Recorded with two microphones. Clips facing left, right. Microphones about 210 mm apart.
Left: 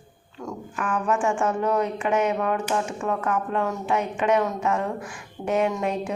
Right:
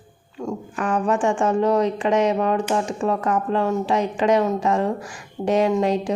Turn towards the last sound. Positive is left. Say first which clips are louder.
# right 5 dB
turn(degrees=-30)  # may be behind; listen again after turning